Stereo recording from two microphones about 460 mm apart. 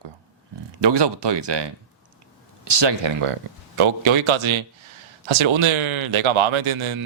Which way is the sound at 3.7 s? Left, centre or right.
Right.